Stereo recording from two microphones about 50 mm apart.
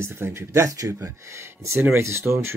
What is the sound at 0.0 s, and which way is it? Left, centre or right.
Speech, right.